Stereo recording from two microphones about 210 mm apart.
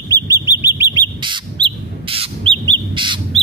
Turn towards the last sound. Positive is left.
turn(degrees=-20)  # may be behind; listen again after turning